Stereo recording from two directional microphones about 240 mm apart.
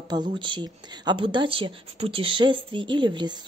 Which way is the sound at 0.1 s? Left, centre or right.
Centre.